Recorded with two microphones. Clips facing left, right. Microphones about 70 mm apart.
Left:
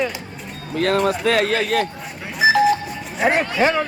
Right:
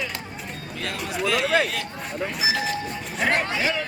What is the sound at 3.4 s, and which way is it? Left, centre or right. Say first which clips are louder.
Speech: left 7 dB; left.